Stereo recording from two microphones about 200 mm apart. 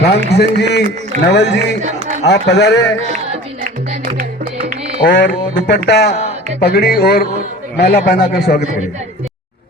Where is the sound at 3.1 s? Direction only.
35° right (ahead or behind).